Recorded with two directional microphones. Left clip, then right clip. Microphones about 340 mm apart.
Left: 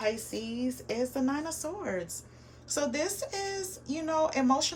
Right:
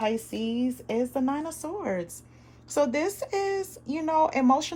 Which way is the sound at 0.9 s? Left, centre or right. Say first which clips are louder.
Right 4 dB; right.